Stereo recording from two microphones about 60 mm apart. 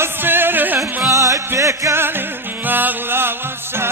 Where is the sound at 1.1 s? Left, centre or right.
Right.